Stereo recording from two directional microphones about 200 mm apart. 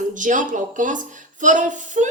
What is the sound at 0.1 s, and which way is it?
A woman's voice, 40° right (ahead or behind).